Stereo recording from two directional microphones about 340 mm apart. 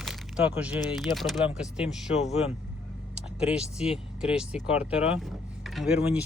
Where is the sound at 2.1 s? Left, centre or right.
Centre.